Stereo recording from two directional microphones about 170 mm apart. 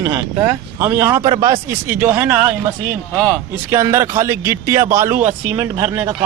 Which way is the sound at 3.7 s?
15° right (ahead or behind).